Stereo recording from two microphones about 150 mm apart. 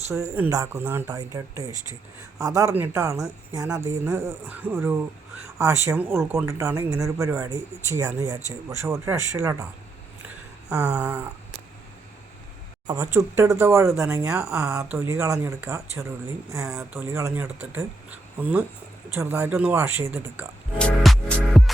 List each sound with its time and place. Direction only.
0.1 s speech: 15° right (ahead or behind)
10.7 s speech: 5° right (ahead or behind)
12.9 s speech: 20° right (ahead or behind)
19.1 s speech: 20° right (ahead or behind)
20.7 s music: 5° left (ahead or behind)